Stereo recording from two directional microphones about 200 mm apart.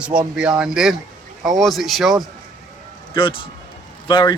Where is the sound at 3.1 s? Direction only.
25° left (ahead or behind).